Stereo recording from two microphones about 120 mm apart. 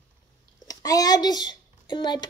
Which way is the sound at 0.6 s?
30° left (ahead or behind).